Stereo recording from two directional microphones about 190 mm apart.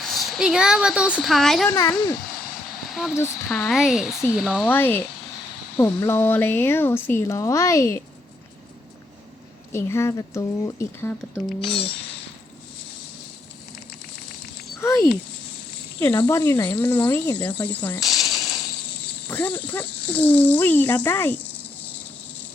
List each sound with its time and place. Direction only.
0.0 s speech: centre (ahead or behind)
2.9 s speech: centre (ahead or behind)
4.7 s speech: 10° left (ahead or behind)
9.7 s speech: 15° left (ahead or behind)
11.3 s speech: centre (ahead or behind)
14.8 s speech: 15° left (ahead or behind); by 18.3 s centre (ahead or behind)
19.3 s speech: 10° left (ahead or behind)